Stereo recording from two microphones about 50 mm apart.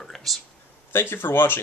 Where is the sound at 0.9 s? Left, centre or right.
Left.